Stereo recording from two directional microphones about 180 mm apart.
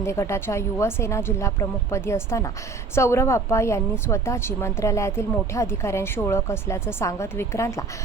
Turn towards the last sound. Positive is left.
turn(degrees=15)  # may be behind; listen again after turning